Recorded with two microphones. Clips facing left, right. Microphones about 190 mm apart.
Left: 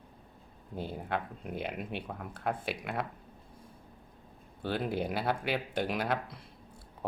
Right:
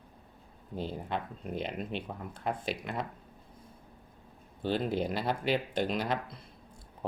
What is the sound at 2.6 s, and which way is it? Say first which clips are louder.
Speech: even; 60° left (ahead or behind).